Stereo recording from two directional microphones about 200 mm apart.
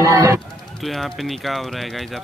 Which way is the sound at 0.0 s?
15° right (ahead or behind).